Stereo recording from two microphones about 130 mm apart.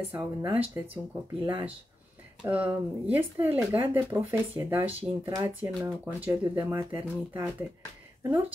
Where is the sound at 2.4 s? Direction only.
10° right (ahead or behind).